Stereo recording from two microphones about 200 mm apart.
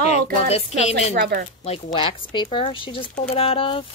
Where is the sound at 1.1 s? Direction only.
55° right (ahead or behind).